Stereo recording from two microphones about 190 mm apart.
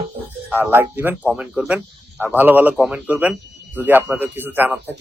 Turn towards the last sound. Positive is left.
turn(degrees=-10)  # may be behind; listen again after turning